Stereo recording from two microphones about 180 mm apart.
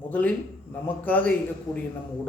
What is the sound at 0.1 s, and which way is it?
A man's voice, 10° left (ahead or behind).